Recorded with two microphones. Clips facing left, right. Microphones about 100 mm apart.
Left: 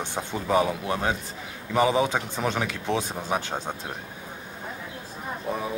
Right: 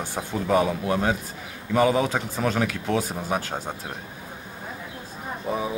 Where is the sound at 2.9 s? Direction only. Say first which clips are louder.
Left 1 dB; 20° left (ahead or behind).